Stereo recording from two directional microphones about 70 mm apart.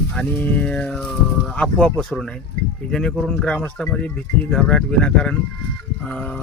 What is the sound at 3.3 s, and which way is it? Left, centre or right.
Speech, centre.